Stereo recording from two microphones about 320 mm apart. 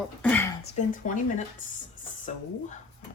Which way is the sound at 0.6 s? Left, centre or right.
Left.